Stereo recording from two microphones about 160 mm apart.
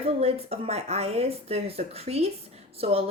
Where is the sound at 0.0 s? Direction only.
40° right (ahead or behind).